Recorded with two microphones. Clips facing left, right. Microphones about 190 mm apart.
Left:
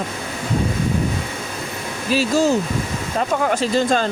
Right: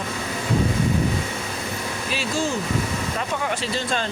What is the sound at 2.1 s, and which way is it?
Speech, 40° left (ahead or behind).